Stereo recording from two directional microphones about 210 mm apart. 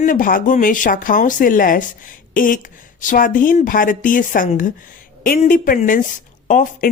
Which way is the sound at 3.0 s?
40° left (ahead or behind).